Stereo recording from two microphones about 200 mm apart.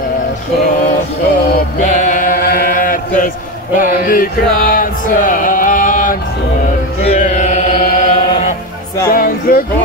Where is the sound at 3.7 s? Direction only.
45° left (ahead or behind).